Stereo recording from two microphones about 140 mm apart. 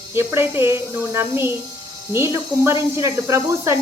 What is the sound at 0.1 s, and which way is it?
Speech, 15° right (ahead or behind).